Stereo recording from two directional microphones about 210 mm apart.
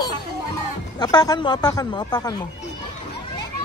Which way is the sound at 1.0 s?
20° left (ahead or behind).